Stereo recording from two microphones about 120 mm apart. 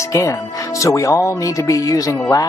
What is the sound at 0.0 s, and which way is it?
Speech, 25° left (ahead or behind).